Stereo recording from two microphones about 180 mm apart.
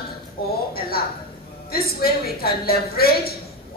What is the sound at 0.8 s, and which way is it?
A woman's voice, 55° left (ahead or behind).